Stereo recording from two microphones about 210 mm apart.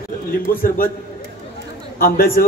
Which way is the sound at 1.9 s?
45° left (ahead or behind).